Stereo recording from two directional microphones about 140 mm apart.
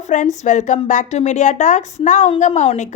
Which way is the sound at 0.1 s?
60° left (ahead or behind).